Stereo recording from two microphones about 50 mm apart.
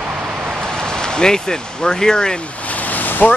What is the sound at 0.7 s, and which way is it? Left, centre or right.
Speech, centre.